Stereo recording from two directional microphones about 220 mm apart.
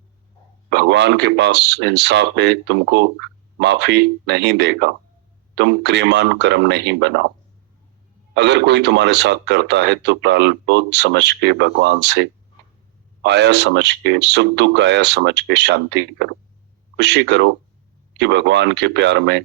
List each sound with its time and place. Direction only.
0.7 s speech: 50° right (ahead or behind)
8.4 s speech: 50° right (ahead or behind)